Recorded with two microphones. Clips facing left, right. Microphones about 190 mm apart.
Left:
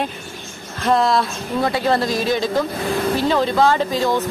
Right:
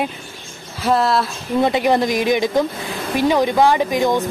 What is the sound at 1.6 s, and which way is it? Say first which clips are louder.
Speech: right 3 dB; 20° right (ahead or behind).